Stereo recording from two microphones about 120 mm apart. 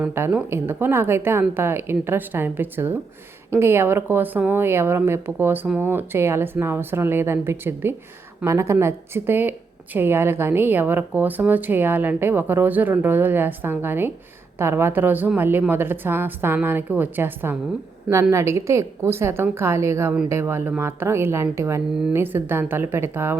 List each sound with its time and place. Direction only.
0.1 s a woman's voice: 20° right (ahead or behind)